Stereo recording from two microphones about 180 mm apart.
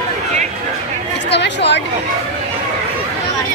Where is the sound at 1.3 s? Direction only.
75° left (ahead or behind).